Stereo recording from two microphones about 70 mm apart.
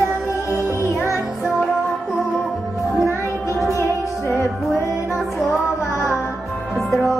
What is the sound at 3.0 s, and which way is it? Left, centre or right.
Music, left.